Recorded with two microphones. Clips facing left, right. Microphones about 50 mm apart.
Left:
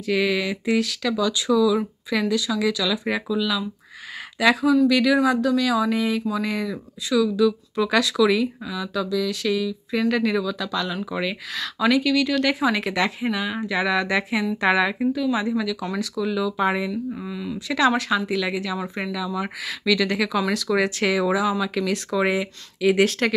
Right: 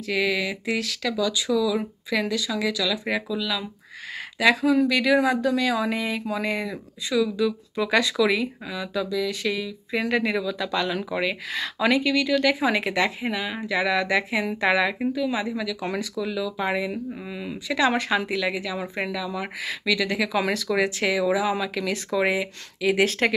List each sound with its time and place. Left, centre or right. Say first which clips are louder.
0.0 s speech: left 2 dB; centre
15.0 s speech: left 3 dB; centre
17.3 s speech: left 2 dB; right
18.3 s speech: left 2 dB; centre